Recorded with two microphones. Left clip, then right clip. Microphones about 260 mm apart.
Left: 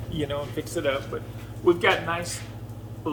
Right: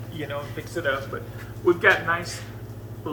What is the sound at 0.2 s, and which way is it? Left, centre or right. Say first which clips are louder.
A man's voice: left 3 dB; left.